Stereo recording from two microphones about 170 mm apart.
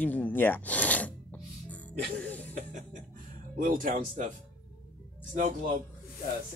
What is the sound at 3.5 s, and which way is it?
Speech, 55° right (ahead or behind).